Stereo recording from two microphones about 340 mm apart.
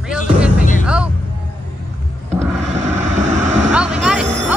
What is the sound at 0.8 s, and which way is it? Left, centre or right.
Music, centre.